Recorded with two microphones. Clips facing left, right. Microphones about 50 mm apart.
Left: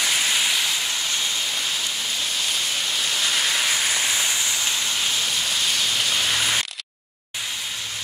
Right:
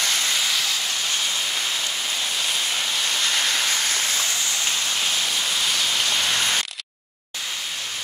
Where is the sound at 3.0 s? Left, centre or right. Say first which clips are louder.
Left 1 dB; centre.